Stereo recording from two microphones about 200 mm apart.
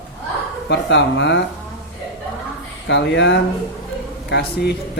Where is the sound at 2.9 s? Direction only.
60° left (ahead or behind).